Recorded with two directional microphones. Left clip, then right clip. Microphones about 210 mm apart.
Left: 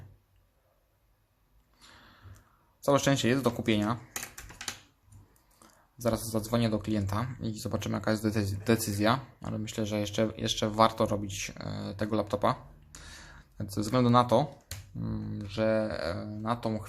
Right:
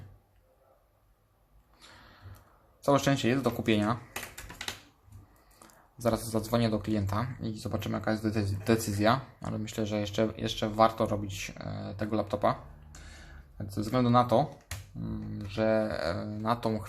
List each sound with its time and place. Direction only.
1.8 s a sound: 5° left (ahead or behind)
2.8 s speech: 10° left (ahead or behind)
5.5 s speech: 5° left (ahead or behind); by 15.4 s 20° left (ahead or behind)
15.4 s speech: 10° left (ahead or behind)